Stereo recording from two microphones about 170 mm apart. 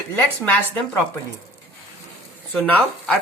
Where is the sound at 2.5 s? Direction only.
5° left (ahead or behind).